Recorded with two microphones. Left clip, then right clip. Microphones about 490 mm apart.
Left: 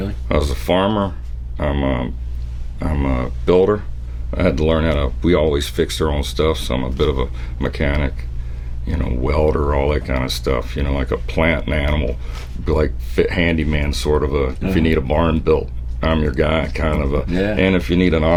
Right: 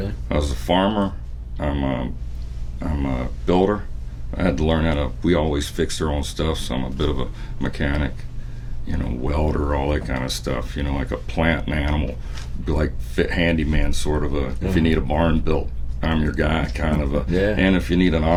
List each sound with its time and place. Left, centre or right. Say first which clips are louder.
0.3 s speech: left 4 dB; left